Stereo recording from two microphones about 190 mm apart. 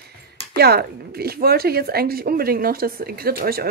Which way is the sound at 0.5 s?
55° right (ahead or behind).